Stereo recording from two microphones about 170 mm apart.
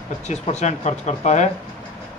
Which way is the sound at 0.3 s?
40° left (ahead or behind).